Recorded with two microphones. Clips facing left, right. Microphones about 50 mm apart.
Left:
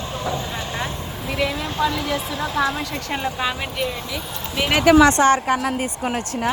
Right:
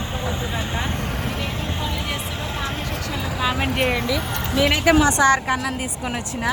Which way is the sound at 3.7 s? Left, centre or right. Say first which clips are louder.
Right 4 dB; right.